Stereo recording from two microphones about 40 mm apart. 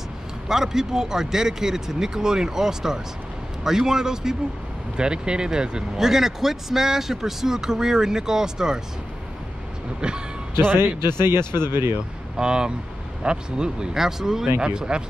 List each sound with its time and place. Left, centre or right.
0.5 s a man's voice: centre
5.9 s a man's voice: centre
9.9 s speech: right
11.1 s speech: right
12.4 s speech: right
13.9 s a man's voice: centre
14.6 s speech: right